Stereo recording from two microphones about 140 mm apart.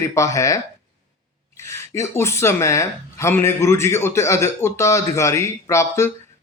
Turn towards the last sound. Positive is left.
turn(degrees=20)  # may be behind; listen again after turning